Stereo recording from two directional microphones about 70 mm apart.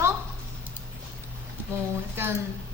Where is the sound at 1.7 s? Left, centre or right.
Right.